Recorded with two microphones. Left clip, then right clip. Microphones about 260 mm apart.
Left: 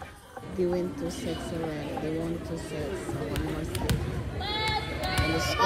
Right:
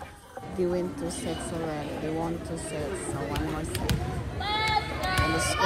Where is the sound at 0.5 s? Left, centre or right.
Centre.